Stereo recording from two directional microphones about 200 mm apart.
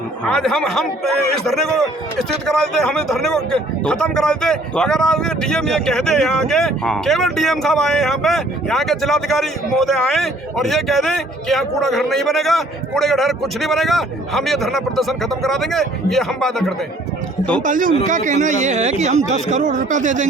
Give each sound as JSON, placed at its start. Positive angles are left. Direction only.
{"t": 0.3, "sound": "a man's voice", "side_deg": 0}
{"t": 17.6, "sound": "speech", "side_deg": -40}